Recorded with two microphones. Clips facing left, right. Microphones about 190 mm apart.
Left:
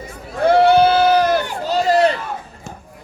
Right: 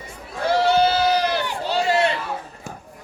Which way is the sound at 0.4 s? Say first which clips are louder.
Left 6 dB; 55° left (ahead or behind).